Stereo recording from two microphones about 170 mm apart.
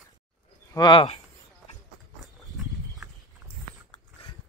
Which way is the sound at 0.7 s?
25° left (ahead or behind).